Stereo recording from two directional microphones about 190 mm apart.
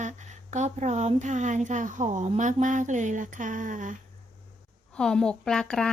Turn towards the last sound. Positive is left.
turn(degrees=5)  # may be behind; listen again after turning